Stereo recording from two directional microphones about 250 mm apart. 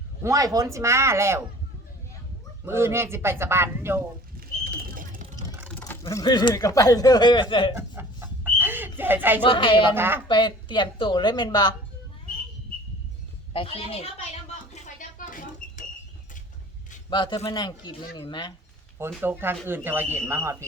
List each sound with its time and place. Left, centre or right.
0.2 s a man's voice: centre
2.6 s a man's voice: centre
4.4 s bird: right
5.5 s a sound: centre
5.8 s speech: centre
7.8 s chicken: centre
9.4 s speech: centre
9.9 s a man's voice: centre
10.2 s speech: centre
13.5 s a child's voice: left
14.7 s rodents: left
17.1 s speech: centre
18.9 s a man's voice: centre